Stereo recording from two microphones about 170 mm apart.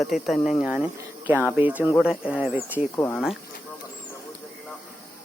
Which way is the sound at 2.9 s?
15° left (ahead or behind).